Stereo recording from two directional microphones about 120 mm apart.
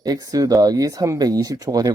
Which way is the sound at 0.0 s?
35° right (ahead or behind).